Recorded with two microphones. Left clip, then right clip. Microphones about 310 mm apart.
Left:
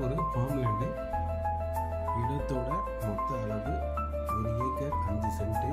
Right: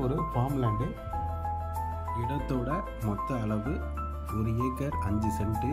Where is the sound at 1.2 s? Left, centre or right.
Centre.